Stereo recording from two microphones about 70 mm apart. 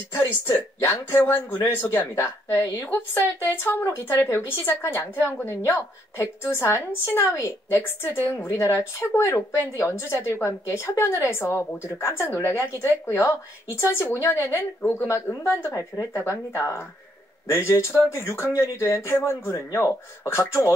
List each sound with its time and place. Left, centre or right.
0.1 s a woman's voice: left